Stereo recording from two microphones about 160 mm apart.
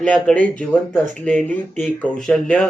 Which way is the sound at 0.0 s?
10° left (ahead or behind).